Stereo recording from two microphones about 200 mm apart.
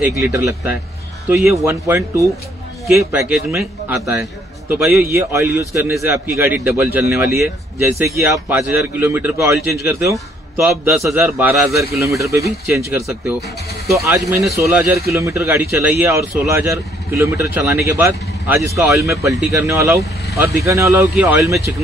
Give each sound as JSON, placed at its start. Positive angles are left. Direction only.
{"t": 0.0, "sound": "a man's voice", "side_deg": -10}